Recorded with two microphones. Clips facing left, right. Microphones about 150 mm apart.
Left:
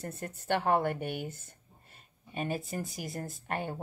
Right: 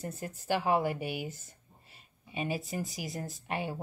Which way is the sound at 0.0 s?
Centre (ahead or behind).